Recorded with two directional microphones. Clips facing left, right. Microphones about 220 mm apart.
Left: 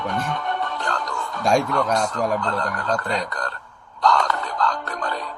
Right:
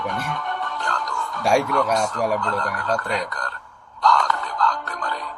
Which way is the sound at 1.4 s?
10° right (ahead or behind).